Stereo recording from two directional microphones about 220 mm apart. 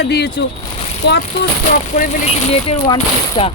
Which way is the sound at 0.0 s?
50° left (ahead or behind).